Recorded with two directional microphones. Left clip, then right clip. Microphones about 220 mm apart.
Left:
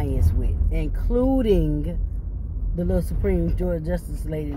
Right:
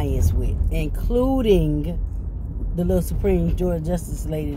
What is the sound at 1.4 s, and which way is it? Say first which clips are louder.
Speech: right 3 dB; 15° left (ahead or behind).